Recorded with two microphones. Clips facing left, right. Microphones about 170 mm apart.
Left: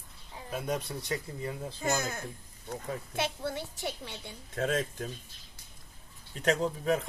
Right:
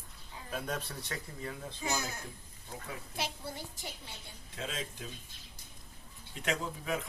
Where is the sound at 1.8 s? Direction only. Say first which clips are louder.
Left 5 dB; 50° left (ahead or behind).